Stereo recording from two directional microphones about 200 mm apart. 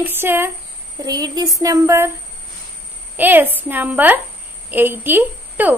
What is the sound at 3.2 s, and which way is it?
A woman's voice, 10° right (ahead or behind).